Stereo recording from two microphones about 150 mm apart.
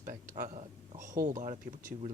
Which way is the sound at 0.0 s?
60° right (ahead or behind).